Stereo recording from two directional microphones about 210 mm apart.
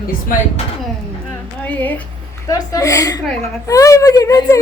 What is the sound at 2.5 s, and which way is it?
Speech, 15° left (ahead or behind).